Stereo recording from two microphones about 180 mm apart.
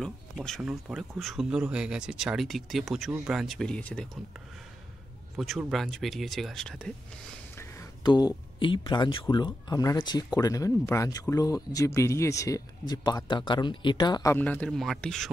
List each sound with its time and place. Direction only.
0.0 s speech: centre (ahead or behind)
5.3 s speech: centre (ahead or behind)
7.5 s speech: 15° left (ahead or behind)
14.3 s speech: 10° left (ahead or behind)